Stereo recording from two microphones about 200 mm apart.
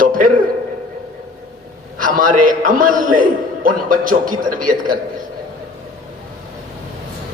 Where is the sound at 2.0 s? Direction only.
40° right (ahead or behind).